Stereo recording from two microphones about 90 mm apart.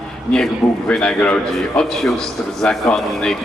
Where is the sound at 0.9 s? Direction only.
10° left (ahead or behind).